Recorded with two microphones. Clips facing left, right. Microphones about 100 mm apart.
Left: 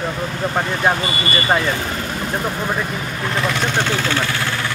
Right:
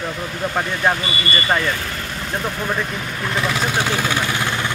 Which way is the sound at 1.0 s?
35° left (ahead or behind).